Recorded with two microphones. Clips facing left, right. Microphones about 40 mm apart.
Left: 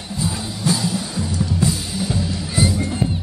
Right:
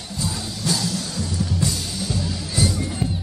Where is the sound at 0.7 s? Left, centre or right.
Centre.